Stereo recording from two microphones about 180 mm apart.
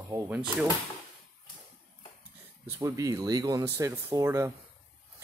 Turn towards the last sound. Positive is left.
turn(degrees=-15)  # may be behind; listen again after turning